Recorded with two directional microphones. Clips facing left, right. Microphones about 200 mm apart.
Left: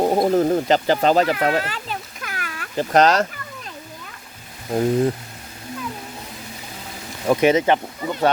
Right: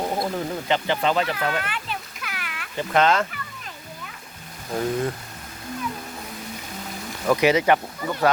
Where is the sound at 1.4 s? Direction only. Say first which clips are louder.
Left 5 dB; 35° left (ahead or behind).